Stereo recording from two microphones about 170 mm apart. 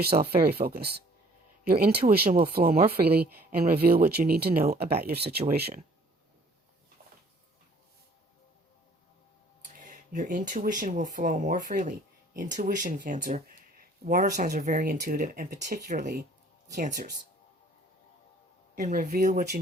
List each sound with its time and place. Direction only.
0.0 s speech: 65° right (ahead or behind)
9.7 s speech: 50° right (ahead or behind)
18.8 s speech: 45° right (ahead or behind)
19.0 s speech: 60° right (ahead or behind)
19.3 s speech: 45° right (ahead or behind)